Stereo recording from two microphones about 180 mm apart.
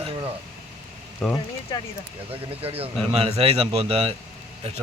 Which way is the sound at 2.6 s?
35° right (ahead or behind).